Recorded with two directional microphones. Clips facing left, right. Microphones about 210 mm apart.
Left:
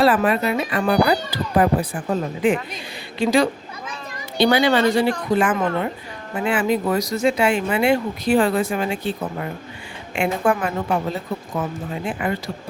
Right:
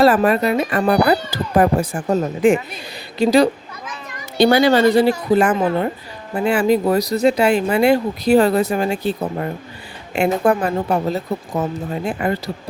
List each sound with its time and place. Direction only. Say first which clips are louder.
0.0 s speech: right 3 dB; 40° right (ahead or behind)